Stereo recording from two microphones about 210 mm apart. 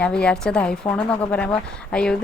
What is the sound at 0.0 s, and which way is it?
A woman's voice, 5° left (ahead or behind).